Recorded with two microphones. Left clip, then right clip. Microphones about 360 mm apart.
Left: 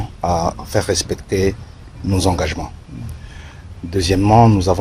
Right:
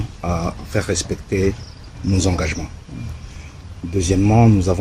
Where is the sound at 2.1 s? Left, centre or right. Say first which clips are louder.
Left 3 dB; centre.